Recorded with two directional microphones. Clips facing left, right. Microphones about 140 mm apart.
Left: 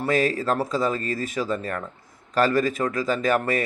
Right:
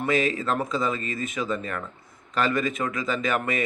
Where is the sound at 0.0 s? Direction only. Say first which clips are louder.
Left 2 dB; 40° left (ahead or behind).